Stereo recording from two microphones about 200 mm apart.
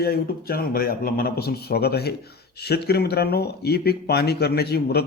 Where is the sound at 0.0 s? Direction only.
50° left (ahead or behind).